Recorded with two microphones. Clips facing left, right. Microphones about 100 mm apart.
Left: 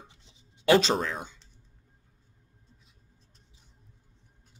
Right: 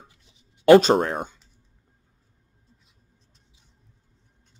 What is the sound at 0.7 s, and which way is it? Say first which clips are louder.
Speech: right 9 dB; 50° right (ahead or behind).